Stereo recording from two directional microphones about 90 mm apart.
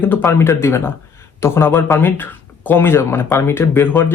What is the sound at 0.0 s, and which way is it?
Speech, 20° left (ahead or behind).